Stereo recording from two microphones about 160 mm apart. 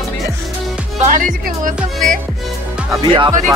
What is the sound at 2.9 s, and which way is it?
Speech, 30° right (ahead or behind).